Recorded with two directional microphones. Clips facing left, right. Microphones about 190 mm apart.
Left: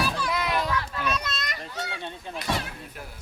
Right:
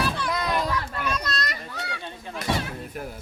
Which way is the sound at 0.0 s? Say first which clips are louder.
Right 1 dB; 10° left (ahead or behind).